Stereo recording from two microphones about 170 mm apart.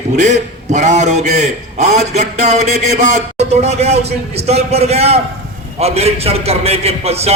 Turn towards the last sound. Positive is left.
turn(degrees=-40)  # may be behind; listen again after turning